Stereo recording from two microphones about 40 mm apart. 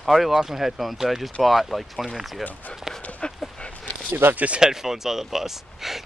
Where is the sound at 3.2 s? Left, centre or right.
Left.